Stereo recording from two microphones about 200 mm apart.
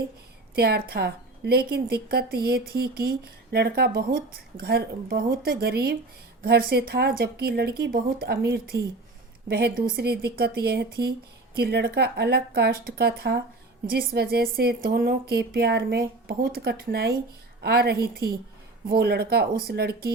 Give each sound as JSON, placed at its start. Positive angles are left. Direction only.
{"t": 0.5, "sound": "a woman's voice", "side_deg": -50}